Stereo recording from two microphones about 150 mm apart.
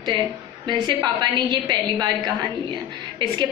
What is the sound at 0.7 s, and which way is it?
A woman's voice, 30° right (ahead or behind).